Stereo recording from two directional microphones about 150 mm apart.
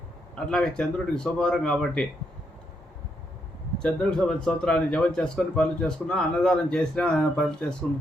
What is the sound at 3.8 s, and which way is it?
Speech, 5° left (ahead or behind).